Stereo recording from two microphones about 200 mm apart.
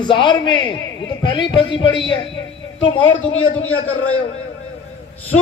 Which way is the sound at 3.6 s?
90° left.